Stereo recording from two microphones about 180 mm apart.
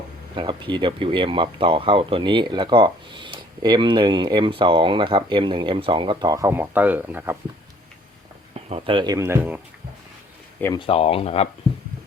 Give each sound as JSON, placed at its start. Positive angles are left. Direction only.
{"t": 0.3, "sound": "speech", "side_deg": -25}
{"t": 8.5, "sound": "speech", "side_deg": -30}
{"t": 9.1, "sound": "speech", "side_deg": -15}
{"t": 10.8, "sound": "speech", "side_deg": 30}